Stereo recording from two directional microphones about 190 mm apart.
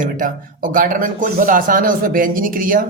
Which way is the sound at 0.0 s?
45° right (ahead or behind).